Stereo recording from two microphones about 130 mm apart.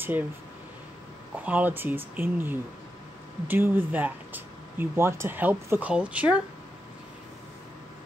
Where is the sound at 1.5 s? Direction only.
15° right (ahead or behind).